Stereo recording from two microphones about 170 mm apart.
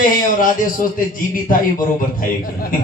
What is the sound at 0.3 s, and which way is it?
Speech, 55° left (ahead or behind).